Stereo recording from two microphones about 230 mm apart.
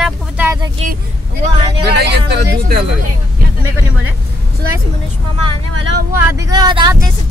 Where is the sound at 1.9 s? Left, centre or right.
Right.